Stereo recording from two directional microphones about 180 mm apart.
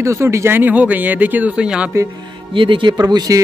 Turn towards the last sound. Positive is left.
turn(degrees=-20)  # may be behind; listen again after turning